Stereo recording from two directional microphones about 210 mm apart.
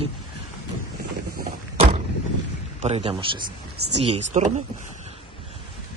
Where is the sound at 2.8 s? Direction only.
30° right (ahead or behind).